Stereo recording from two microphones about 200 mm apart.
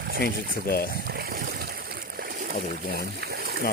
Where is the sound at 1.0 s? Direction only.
50° right (ahead or behind).